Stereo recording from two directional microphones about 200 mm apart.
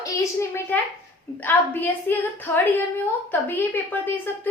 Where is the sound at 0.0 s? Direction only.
10° left (ahead or behind).